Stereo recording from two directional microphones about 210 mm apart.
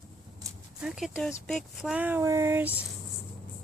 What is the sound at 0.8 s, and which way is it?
Speech, centre (ahead or behind).